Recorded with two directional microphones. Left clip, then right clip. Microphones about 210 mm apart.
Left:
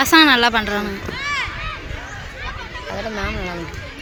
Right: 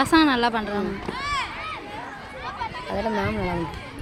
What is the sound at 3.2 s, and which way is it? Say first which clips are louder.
Speech: left 1 dB; 35° right (ahead or behind).